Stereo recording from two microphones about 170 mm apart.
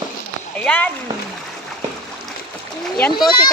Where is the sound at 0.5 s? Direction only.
10° left (ahead or behind).